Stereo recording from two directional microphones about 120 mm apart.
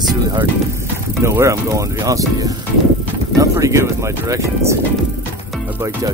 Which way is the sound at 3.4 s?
25° right (ahead or behind).